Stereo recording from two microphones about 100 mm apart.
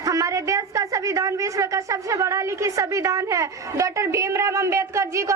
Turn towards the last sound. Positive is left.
turn(degrees=-30)  # may be behind; listen again after turning